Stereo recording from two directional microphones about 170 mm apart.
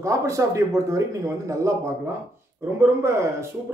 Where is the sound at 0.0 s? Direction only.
20° right (ahead or behind).